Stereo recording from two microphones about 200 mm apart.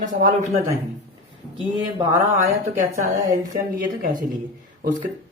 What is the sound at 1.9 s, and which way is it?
Speech, 20° right (ahead or behind).